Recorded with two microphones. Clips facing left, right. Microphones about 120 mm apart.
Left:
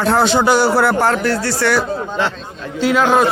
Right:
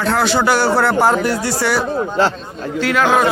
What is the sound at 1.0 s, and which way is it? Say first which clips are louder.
Speech: right 1 dB; 15° right (ahead or behind).